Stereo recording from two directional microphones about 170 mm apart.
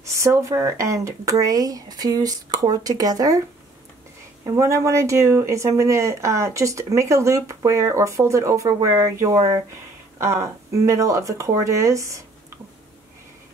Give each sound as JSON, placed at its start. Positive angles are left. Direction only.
{"t": 0.0, "sound": "speech", "side_deg": -20}
{"t": 4.5, "sound": "speech", "side_deg": -20}